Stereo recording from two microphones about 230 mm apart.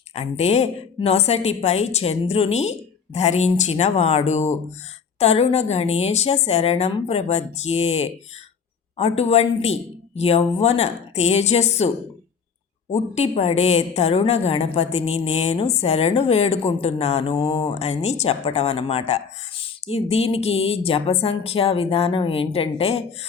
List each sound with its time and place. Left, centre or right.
0.1 s a woman's voice: left
12.9 s a woman's voice: left